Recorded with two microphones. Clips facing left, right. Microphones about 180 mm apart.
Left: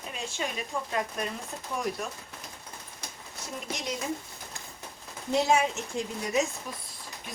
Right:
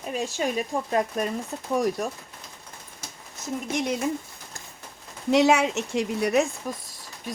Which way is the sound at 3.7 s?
55° right (ahead or behind).